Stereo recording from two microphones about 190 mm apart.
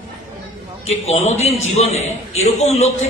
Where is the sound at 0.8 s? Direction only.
35° left (ahead or behind).